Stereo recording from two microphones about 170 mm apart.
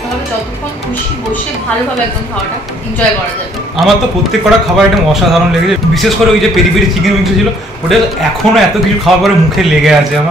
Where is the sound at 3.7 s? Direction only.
Centre (ahead or behind).